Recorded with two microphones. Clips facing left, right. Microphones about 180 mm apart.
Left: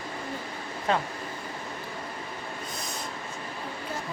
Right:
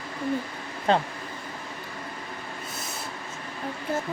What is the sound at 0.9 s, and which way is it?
Speech, 30° right (ahead or behind).